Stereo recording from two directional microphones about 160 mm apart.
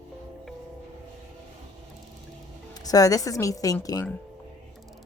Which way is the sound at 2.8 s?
25° left (ahead or behind).